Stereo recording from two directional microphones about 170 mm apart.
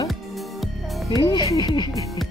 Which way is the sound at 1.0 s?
20° left (ahead or behind).